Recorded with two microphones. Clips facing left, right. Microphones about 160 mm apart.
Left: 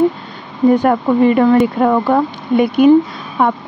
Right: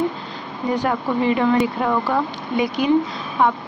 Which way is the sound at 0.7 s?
50° left (ahead or behind).